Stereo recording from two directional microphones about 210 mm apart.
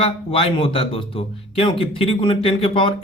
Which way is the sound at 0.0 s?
25° left (ahead or behind).